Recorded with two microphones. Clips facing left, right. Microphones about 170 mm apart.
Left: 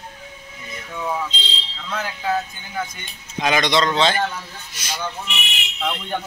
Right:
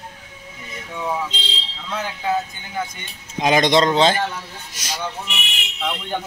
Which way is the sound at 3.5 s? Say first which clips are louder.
Right 4 dB; 40° right (ahead or behind).